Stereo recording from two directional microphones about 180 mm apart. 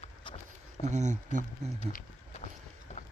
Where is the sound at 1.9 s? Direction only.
40° left (ahead or behind).